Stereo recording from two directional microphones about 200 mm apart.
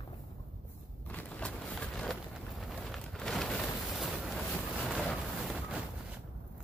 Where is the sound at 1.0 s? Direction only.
5° left (ahead or behind).